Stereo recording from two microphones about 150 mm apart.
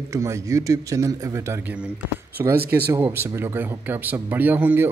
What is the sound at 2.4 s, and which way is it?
A man's voice, 20° right (ahead or behind).